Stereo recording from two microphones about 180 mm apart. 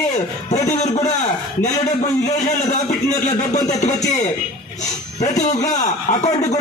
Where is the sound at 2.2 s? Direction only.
40° left (ahead or behind).